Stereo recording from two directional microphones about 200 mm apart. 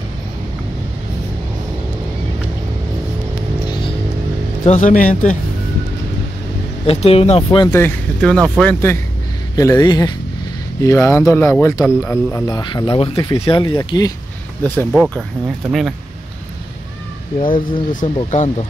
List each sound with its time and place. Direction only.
3.6 s music: 20° left (ahead or behind)
4.6 s speech: 35° left (ahead or behind)
6.9 s speech: 30° left (ahead or behind)
14.9 s speech: centre (ahead or behind)
17.4 s speech: 25° left (ahead or behind)